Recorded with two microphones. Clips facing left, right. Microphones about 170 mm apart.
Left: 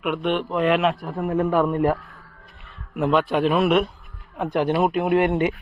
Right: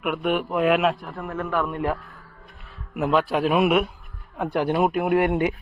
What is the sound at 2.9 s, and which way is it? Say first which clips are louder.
A child's voice: left 1 dB; 5° right (ahead or behind).